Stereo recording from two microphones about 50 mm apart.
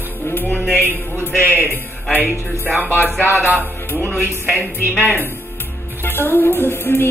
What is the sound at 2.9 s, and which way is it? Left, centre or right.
Music, left.